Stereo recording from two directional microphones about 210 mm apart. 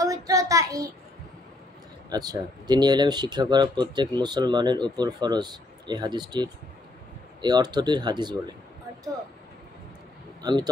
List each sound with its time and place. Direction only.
0.0 s a child's voice: 15° right (ahead or behind)
2.0 s speech: 20° right (ahead or behind)
10.4 s speech: 20° right (ahead or behind)